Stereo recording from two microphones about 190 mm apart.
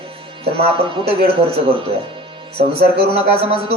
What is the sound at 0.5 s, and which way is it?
Speech, 30° right (ahead or behind).